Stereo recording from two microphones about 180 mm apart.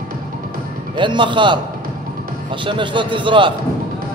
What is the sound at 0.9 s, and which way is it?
A man's voice, 25° right (ahead or behind).